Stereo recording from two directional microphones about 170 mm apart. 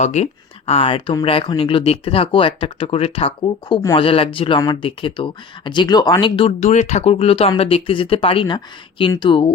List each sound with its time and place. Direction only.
0.0 s speech: 40° left (ahead or behind)